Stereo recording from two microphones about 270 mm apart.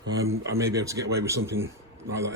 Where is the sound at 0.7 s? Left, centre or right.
Centre.